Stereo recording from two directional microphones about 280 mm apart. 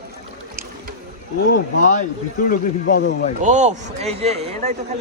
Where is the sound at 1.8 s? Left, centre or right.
Left.